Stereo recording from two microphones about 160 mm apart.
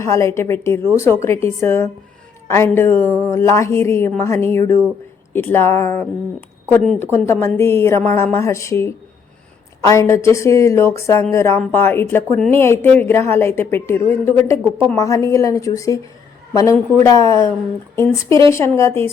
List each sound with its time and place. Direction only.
0.0 s speech: 15° left (ahead or behind)
9.9 s a woman's voice: 20° left (ahead or behind)
18.3 s speech: 30° right (ahead or behind)
18.5 s speech: 15° left (ahead or behind)